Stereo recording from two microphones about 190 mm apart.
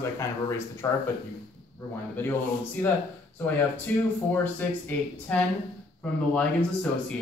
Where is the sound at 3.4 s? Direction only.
10° left (ahead or behind).